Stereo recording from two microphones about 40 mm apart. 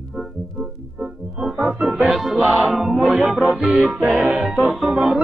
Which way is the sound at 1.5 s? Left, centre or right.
Right.